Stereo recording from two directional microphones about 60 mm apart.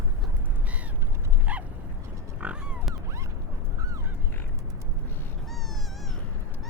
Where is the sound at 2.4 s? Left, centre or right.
Centre.